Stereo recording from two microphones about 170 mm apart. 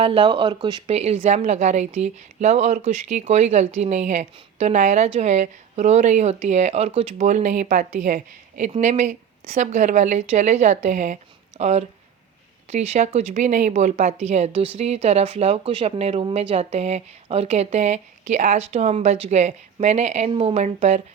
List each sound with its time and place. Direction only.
0.0 s speech: 30° right (ahead or behind)
0.9 s speech: 40° right (ahead or behind)